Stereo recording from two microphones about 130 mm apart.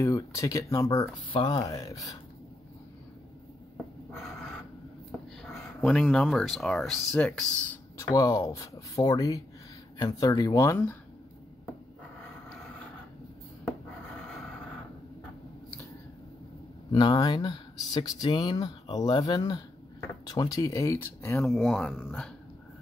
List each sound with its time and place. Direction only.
0.0 s speech: 25° left (ahead or behind)
5.8 s speech: 5° left (ahead or behind)
8.0 s speech: 25° left (ahead or behind)
16.9 s speech: 30° left (ahead or behind)
21.4 s speech: centre (ahead or behind)